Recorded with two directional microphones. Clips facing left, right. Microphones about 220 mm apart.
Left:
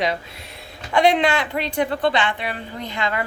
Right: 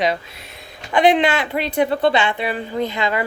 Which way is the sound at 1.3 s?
25° right (ahead or behind).